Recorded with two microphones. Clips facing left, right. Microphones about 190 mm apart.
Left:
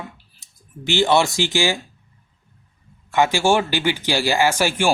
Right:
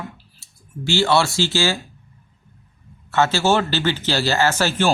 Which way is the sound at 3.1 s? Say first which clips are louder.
Left 1 dB; 15° left (ahead or behind).